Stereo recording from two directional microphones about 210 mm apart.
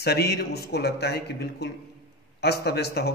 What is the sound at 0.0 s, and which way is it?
A man's voice, 50° left (ahead or behind).